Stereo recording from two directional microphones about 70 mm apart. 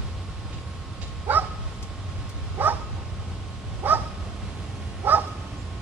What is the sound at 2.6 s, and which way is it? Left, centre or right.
Dog, right.